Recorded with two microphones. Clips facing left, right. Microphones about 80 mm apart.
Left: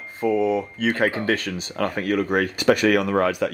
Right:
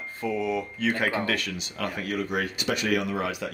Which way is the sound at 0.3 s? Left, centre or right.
Left.